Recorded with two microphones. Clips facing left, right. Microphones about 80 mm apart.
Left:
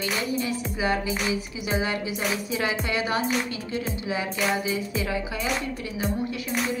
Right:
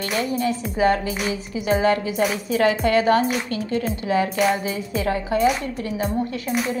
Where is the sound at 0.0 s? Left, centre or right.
Right.